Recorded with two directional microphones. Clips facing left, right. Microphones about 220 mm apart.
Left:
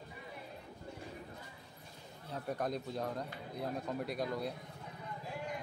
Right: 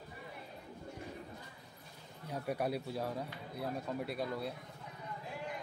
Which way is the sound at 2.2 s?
10° right (ahead or behind).